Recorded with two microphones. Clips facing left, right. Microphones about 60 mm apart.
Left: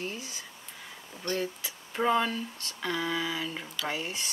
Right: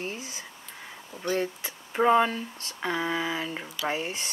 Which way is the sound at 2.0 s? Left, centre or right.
Right.